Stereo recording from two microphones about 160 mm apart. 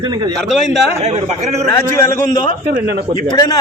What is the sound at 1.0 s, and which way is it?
Speech, 40° right (ahead or behind).